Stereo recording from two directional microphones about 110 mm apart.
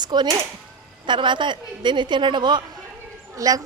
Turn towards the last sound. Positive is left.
turn(degrees=-35)  # may be behind; listen again after turning